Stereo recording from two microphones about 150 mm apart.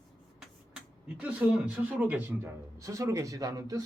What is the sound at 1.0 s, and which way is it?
A man's voice, 10° right (ahead or behind).